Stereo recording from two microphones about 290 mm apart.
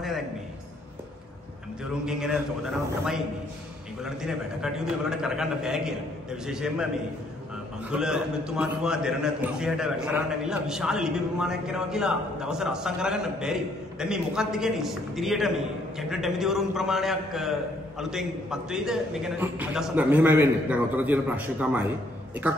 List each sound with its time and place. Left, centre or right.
2.0 s a man's voice: centre
4.0 s a man's voice: centre
7.9 s a man's voice: centre